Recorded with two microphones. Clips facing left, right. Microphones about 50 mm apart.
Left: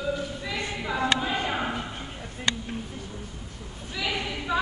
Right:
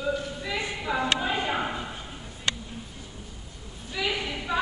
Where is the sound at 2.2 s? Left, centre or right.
Left.